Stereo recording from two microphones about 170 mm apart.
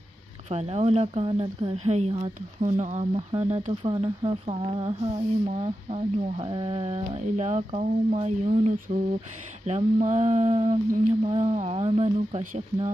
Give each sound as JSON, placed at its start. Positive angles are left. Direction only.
{"t": 0.5, "sound": "speech", "side_deg": -40}